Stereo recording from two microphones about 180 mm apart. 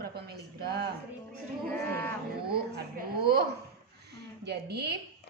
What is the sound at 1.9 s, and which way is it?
Livestock, 10° left (ahead or behind).